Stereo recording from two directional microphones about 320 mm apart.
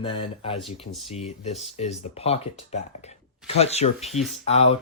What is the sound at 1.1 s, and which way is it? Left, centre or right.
Speech, centre.